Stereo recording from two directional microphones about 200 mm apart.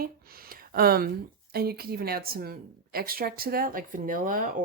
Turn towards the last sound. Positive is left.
turn(degrees=-45)  # may be behind; listen again after turning